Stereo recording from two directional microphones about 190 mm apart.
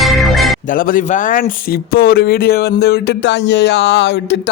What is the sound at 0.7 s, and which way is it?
Speech, 45° left (ahead or behind).